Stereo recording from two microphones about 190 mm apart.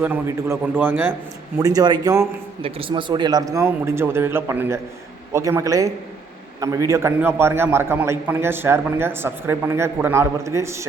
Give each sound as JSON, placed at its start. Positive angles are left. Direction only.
{"t": 0.0, "sound": "a man's voice", "side_deg": -10}